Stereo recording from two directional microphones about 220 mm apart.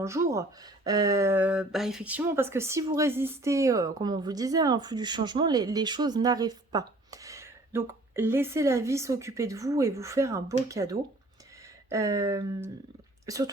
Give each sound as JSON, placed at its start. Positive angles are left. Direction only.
{"t": 0.0, "sound": "speech", "side_deg": -15}